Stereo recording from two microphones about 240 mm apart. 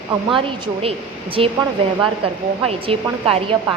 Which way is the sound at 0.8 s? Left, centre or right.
Right.